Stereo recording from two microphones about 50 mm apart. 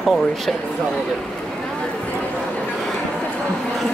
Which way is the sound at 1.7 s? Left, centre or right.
Left.